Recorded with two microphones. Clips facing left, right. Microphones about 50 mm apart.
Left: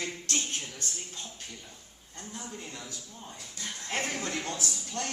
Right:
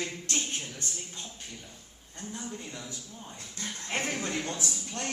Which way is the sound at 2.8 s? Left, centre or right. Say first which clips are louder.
Right 1 dB; centre.